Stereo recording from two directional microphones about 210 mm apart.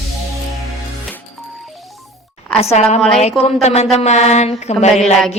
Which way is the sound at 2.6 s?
30° left (ahead or behind).